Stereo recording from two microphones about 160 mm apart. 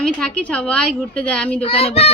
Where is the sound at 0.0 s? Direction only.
5° left (ahead or behind).